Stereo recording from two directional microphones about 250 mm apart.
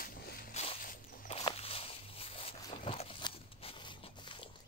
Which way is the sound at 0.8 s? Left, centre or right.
Left.